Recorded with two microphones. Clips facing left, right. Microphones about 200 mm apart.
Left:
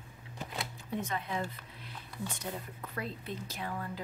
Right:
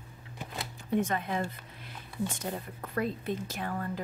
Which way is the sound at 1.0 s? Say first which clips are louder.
Right 2 dB; 50° right (ahead or behind).